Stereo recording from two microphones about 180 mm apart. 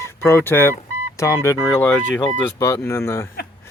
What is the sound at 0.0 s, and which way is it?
Speech, 15° left (ahead or behind).